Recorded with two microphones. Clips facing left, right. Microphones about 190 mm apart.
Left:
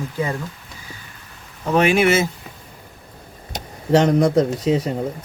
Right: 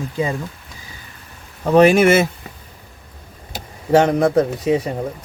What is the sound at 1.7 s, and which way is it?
Speech, 40° right (ahead or behind).